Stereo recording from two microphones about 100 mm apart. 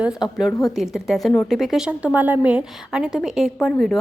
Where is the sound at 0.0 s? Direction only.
5° right (ahead or behind).